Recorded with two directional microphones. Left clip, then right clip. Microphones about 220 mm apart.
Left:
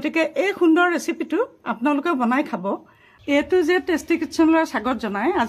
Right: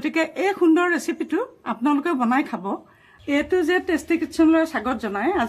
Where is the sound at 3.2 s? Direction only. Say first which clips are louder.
Left 2 dB; 45° left (ahead or behind).